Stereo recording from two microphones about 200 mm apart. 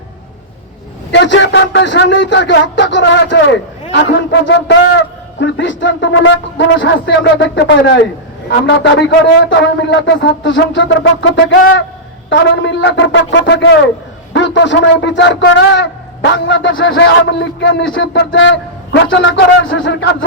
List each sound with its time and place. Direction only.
1.1 s a man's voice: 65° left (ahead or behind)